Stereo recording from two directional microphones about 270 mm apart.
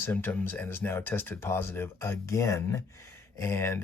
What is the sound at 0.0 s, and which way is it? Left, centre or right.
Speech, centre.